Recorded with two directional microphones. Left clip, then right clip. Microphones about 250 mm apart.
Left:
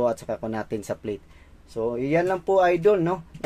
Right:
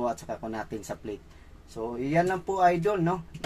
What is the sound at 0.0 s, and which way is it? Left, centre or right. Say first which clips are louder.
Speech: left 6 dB; left.